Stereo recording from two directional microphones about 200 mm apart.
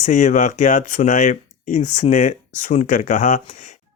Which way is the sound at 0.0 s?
35° left (ahead or behind).